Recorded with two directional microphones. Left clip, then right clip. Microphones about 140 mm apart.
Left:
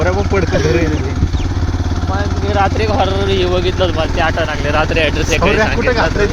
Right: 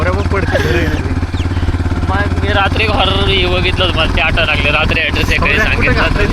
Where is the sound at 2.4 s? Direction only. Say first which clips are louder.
Right 1 dB; 55° left (ahead or behind).